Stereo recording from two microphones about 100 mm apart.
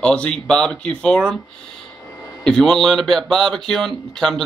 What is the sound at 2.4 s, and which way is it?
A man's voice, 5° left (ahead or behind).